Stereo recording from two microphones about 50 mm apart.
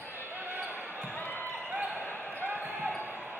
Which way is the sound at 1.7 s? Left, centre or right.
Right.